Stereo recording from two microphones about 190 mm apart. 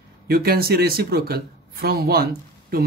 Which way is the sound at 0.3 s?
55° right (ahead or behind).